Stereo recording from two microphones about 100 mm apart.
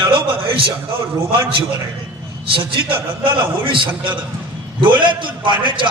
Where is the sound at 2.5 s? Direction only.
60° right (ahead or behind).